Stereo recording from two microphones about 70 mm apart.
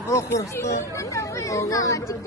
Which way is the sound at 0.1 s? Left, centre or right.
Left.